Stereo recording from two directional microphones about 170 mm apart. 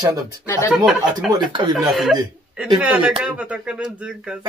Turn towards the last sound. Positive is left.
turn(degrees=-5)  # may be behind; listen again after turning